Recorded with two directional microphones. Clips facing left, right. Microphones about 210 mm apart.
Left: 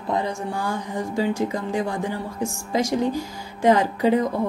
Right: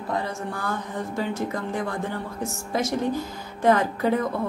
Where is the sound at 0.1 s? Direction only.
15° left (ahead or behind).